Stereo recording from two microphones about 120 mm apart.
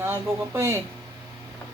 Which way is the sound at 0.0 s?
20° right (ahead or behind).